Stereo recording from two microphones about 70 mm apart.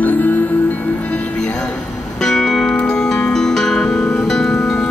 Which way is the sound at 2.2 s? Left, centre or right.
Centre.